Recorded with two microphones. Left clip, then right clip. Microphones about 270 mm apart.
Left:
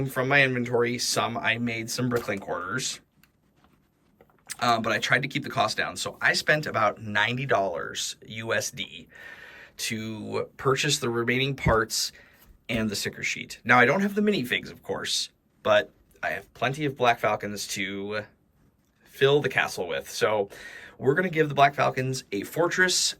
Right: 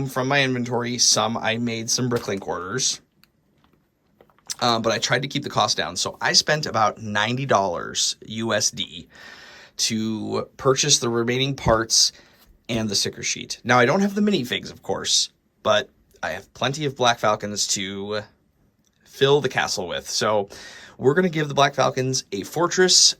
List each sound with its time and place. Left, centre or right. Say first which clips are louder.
0.0 s speech: right 1 dB; centre
4.4 s speech: right 3 dB; centre